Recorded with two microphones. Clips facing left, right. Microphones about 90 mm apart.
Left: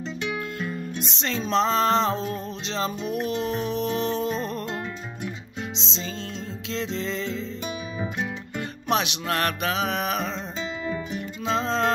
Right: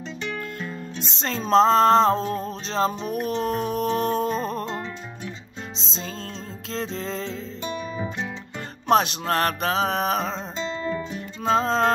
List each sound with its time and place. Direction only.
1.2 s music: 40° right (ahead or behind)
5.8 s music: 45° right (ahead or behind)
8.8 s music: 40° right (ahead or behind)
11.4 s music: 45° right (ahead or behind)